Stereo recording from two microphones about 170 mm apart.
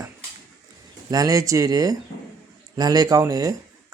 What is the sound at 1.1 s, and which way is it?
Speech, 20° right (ahead or behind).